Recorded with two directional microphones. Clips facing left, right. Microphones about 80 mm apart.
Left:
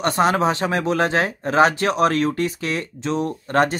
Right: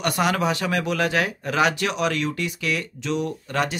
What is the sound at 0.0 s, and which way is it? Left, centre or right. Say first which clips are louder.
Speech: left 4 dB; left.